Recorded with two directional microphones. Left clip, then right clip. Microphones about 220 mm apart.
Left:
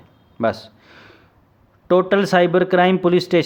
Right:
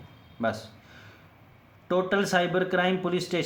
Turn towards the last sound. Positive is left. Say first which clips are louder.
# left 12 dB
turn(degrees=50)  # may be behind; listen again after turning